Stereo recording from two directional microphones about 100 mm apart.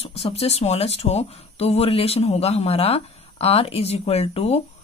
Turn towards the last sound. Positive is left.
turn(degrees=90)